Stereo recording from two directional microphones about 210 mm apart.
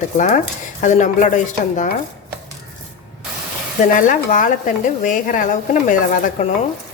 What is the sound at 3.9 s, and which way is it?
A woman's voice, 40° left (ahead or behind).